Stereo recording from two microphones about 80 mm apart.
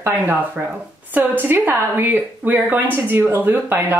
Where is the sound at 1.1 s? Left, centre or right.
Right.